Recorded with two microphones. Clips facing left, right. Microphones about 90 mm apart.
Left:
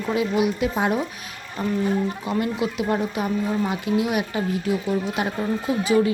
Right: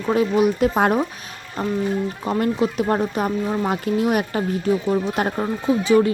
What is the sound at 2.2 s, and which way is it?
Speech, 40° right (ahead or behind).